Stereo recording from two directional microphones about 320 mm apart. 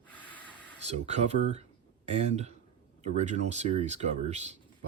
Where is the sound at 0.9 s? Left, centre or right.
Centre.